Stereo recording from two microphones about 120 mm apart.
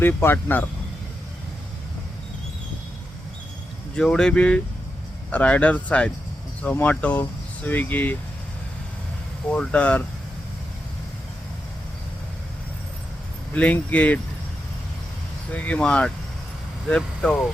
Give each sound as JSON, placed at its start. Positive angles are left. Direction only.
{"t": 0.0, "sound": "speech", "side_deg": 15}
{"t": 3.9, "sound": "speech", "side_deg": 5}
{"t": 9.5, "sound": "speech", "side_deg": 10}
{"t": 13.5, "sound": "speech", "side_deg": 10}
{"t": 15.5, "sound": "speech", "side_deg": 10}